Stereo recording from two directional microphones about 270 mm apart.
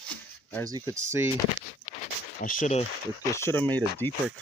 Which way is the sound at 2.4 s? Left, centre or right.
Left.